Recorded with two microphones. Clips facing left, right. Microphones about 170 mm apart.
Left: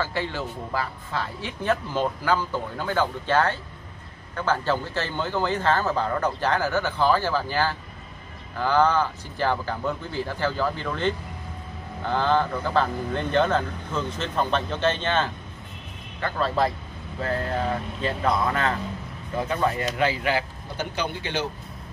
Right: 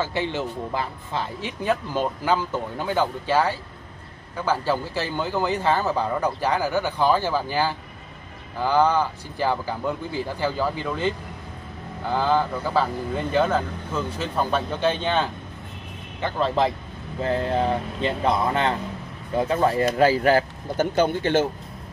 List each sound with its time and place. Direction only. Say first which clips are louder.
0.0 s speech: right 3 dB; 20° right (ahead or behind); by 21.5 s 50° right (ahead or behind)